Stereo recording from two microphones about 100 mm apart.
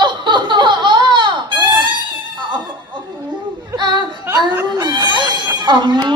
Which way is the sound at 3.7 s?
50° right (ahead or behind).